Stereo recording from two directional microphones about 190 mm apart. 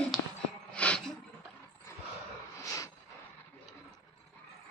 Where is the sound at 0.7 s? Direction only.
5° left (ahead or behind).